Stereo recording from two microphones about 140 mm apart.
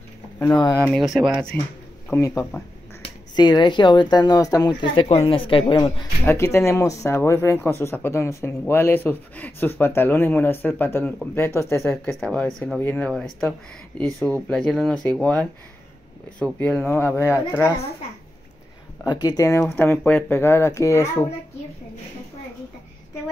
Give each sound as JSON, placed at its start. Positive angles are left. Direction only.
{"t": 0.9, "sound": "speech", "side_deg": 0}
{"t": 1.5, "sound": "speech", "side_deg": 10}
{"t": 3.0, "sound": "speech", "side_deg": 30}
{"t": 5.0, "sound": "speech", "side_deg": 45}
{"t": 6.2, "sound": "speech", "side_deg": 20}
{"t": 12.2, "sound": "speech", "side_deg": 5}
{"t": 14.0, "sound": "speech", "side_deg": -25}
{"t": 14.5, "sound": "speech", "side_deg": 5}
{"t": 16.5, "sound": "speech", "side_deg": 15}
{"t": 19.0, "sound": "speech", "side_deg": 25}